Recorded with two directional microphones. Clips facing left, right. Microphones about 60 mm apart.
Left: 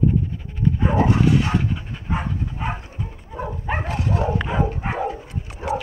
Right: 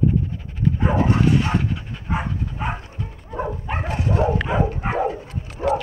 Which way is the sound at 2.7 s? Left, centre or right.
Centre.